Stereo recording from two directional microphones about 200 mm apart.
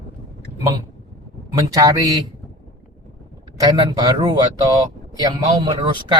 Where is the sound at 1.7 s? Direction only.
20° right (ahead or behind).